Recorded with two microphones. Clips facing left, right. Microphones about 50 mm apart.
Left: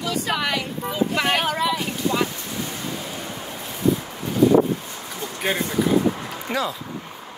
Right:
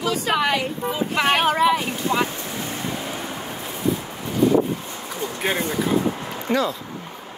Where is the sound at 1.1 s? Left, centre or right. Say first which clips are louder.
Right 6 dB; right.